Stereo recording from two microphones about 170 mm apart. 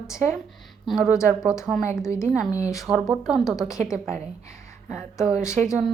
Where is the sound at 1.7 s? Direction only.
15° right (ahead or behind).